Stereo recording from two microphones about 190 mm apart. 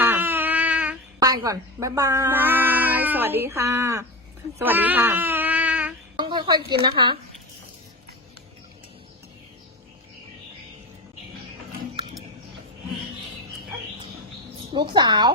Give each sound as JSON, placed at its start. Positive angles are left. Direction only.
{"t": 0.0, "sound": "a sound", "side_deg": -10}
{"t": 1.2, "sound": "speech", "side_deg": -20}
{"t": 6.1, "sound": "a woman's voice", "side_deg": -25}
{"t": 14.7, "sound": "a woman's voice", "side_deg": -25}